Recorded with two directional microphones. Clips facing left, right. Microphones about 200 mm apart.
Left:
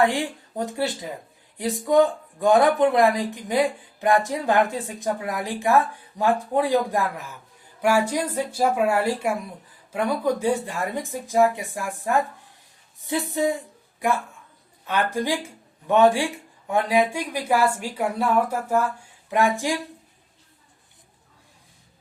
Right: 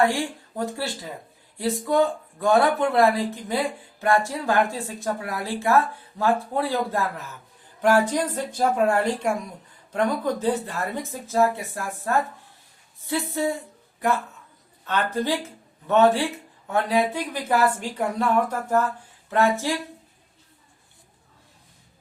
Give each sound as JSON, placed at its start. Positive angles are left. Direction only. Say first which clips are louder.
{"t": 0.1, "sound": "speech", "louder": "even", "side_deg": 20}
{"t": 14.8, "sound": "speech", "louder": "even", "side_deg": 10}